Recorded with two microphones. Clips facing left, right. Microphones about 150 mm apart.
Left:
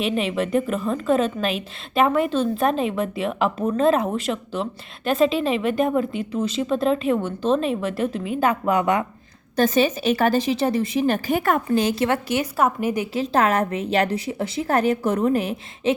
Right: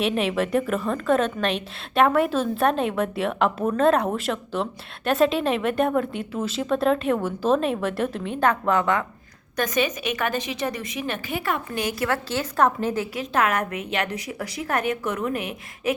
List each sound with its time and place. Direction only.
0.0 s a woman's voice: centre (ahead or behind); by 9.0 s 15° left (ahead or behind)
9.6 s a woman's voice: 30° left (ahead or behind)
11.7 s a woman's voice: 25° left (ahead or behind)
13.1 s a woman's voice: 30° left (ahead or behind)